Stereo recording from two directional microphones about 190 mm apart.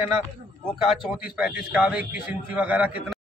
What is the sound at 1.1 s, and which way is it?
A man's voice, 5° right (ahead or behind).